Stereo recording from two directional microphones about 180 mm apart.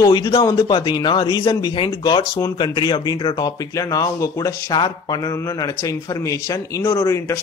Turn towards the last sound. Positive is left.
turn(degrees=15)  # may be behind; listen again after turning